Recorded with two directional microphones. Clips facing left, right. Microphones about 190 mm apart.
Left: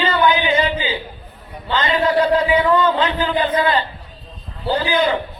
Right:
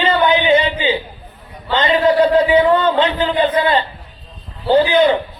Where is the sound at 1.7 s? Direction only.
25° right (ahead or behind).